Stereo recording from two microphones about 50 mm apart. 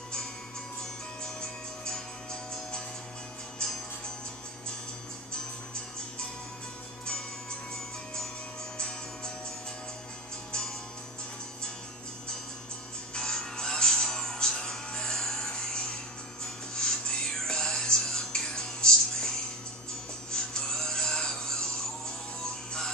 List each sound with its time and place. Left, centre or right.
3.5 s music: centre
8.7 s music: centre
13.1 s music: centre
20.5 s music: centre